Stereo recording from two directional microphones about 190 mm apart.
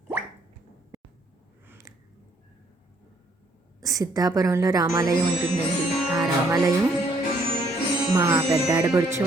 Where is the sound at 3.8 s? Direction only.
20° right (ahead or behind).